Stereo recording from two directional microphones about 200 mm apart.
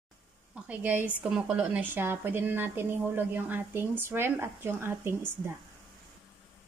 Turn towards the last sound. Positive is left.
turn(degrees=-10)  # may be behind; listen again after turning